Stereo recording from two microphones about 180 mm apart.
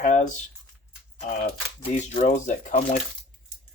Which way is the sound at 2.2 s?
45° left (ahead or behind).